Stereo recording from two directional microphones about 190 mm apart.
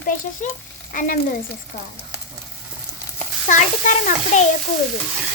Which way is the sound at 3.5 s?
40° left (ahead or behind).